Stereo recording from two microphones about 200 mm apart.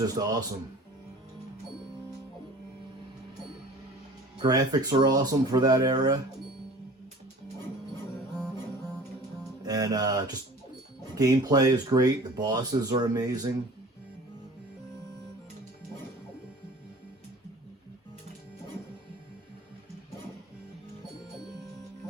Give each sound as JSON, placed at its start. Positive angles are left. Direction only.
{"t": 0.2, "sound": "speech", "side_deg": -20}
{"t": 4.4, "sound": "speech", "side_deg": -20}
{"t": 9.6, "sound": "speech", "side_deg": -20}